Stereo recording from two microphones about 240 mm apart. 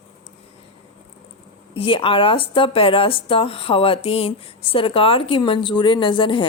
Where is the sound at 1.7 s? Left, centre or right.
Left.